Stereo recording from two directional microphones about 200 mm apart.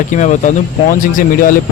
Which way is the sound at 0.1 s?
35° left (ahead or behind).